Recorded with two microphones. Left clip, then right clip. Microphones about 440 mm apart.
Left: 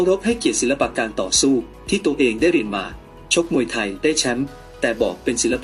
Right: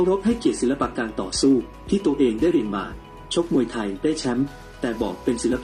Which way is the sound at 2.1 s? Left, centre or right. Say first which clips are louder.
Left 3 dB; left.